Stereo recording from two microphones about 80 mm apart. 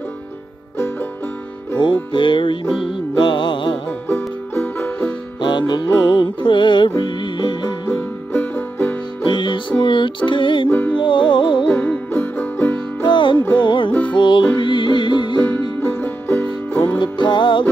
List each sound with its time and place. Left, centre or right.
2.1 s music: left
4.1 s music: left
5.4 s music: left
7.9 s music: left
9.2 s music: left
10.7 s music: left
11.0 s music: left
12.1 s music: left
13.1 s music: left
15.8 s music: left
17.0 s music: left